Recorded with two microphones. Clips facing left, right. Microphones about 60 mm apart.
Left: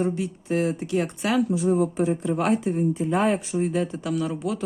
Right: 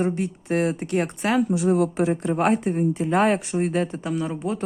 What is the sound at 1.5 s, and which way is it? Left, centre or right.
Speech, right.